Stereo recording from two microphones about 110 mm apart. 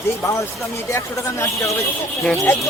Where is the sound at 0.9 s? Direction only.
25° left (ahead or behind).